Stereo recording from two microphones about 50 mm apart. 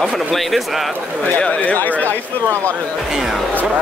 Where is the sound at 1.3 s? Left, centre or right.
Left.